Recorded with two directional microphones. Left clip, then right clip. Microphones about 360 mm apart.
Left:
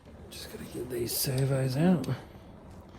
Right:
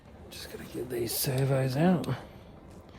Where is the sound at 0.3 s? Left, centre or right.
Right.